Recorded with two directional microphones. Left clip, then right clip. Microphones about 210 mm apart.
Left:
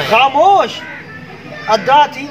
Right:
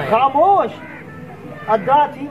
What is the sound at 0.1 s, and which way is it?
Speech, 5° left (ahead or behind).